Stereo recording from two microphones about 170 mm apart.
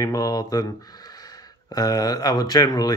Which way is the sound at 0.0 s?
20° left (ahead or behind).